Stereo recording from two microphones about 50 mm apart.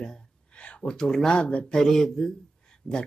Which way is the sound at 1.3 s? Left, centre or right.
Left.